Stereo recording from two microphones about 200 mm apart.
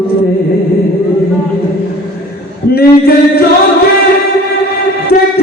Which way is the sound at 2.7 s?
50° left (ahead or behind).